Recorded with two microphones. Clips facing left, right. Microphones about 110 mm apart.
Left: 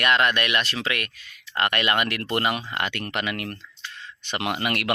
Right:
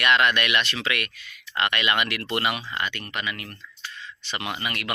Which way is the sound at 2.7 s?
70° left (ahead or behind).